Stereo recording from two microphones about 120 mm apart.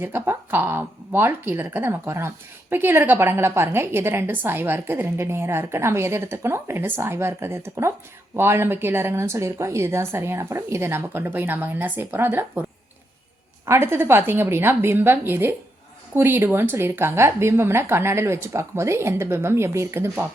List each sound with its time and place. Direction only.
0.0 s speech: 20° right (ahead or behind)
13.7 s speech: 20° right (ahead or behind)